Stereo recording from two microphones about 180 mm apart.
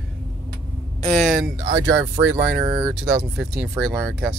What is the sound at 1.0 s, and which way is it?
Speech, 5° left (ahead or behind).